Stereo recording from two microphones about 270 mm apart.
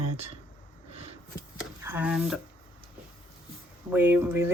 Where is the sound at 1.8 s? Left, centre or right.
Centre.